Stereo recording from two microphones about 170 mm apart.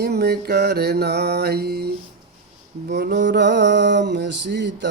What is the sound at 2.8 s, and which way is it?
Mantra, 80° right.